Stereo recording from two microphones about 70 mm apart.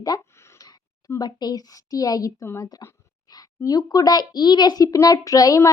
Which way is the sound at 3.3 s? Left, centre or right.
Left.